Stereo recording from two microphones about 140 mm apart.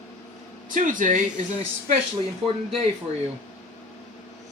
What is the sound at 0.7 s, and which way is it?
Speech, 70° right (ahead or behind).